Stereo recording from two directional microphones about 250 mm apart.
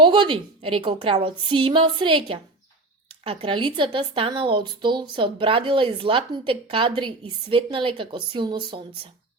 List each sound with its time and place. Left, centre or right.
0.0 s speech: centre